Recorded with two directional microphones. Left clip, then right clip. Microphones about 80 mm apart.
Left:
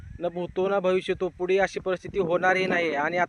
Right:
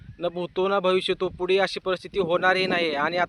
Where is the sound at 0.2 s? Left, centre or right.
Right.